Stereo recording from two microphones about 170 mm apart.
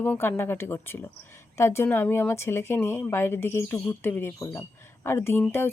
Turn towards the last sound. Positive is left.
turn(degrees=15)  # may be behind; listen again after turning